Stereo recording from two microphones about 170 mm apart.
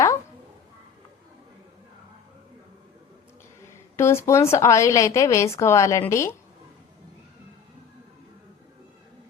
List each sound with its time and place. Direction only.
3.7 s a woman's voice: 15° left (ahead or behind)